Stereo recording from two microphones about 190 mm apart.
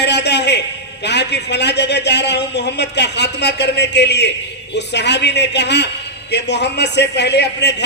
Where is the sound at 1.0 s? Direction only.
65° left (ahead or behind).